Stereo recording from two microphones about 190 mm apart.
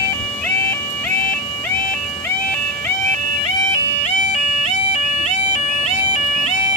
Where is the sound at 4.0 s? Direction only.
35° left (ahead or behind).